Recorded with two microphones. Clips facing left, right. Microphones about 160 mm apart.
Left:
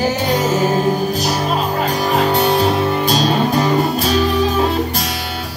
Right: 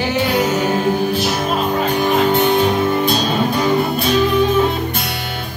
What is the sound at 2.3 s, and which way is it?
Music, 35° left (ahead or behind).